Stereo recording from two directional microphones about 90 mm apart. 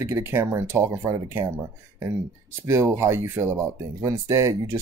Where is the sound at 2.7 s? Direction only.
30° right (ahead or behind).